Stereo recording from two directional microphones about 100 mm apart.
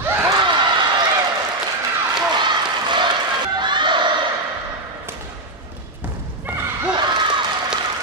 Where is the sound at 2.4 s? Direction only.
50° right (ahead or behind).